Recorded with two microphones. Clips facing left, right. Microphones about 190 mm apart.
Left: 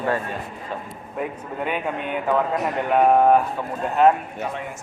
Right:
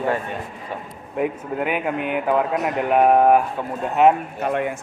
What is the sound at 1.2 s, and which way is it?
A man's voice, 10° right (ahead or behind).